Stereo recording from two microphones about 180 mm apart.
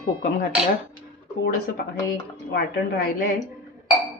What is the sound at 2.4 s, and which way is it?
Speech, 65° left (ahead or behind).